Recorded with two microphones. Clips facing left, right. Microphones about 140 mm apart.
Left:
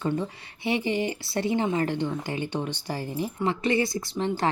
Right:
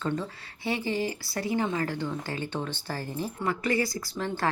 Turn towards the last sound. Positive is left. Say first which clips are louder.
# left 3 dB
turn(degrees=20)  # may be behind; listen again after turning